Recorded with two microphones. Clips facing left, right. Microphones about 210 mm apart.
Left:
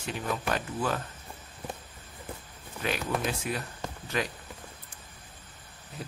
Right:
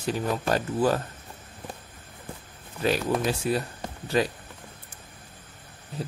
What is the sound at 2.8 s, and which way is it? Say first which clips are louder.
Speech: right 6 dB; 35° right (ahead or behind).